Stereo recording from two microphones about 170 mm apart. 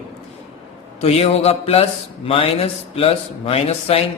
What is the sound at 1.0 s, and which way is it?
A man's voice, 40° left (ahead or behind).